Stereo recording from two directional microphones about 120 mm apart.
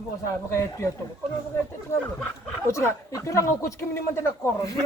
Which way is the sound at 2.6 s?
25° left (ahead or behind).